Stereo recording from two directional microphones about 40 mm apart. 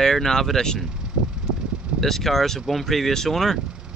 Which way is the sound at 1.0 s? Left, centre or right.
Right.